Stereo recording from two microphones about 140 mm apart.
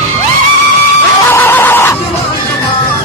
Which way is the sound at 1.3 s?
15° left (ahead or behind).